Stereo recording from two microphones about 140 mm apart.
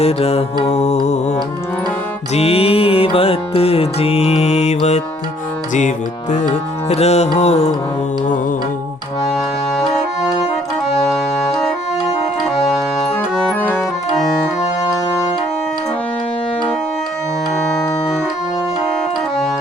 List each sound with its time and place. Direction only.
0.0 s music: 45° left (ahead or behind)
2.3 s music: 45° left (ahead or behind)
6.3 s music: 60° left (ahead or behind)
9.7 s accordion: centre (ahead or behind)
13.5 s music: 10° left (ahead or behind)